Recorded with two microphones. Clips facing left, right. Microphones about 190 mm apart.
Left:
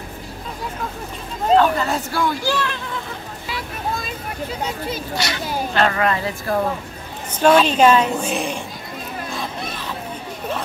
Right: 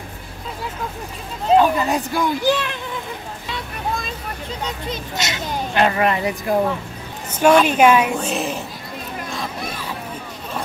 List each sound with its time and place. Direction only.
1.5 s speech: 15° right (ahead or behind)
5.1 s speech: 20° right (ahead or behind)
7.6 s speech: 10° right (ahead or behind)
8.2 s speech: centre (ahead or behind)